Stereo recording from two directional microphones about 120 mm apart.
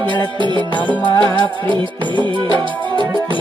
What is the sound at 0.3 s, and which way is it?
Music, 40° right (ahead or behind).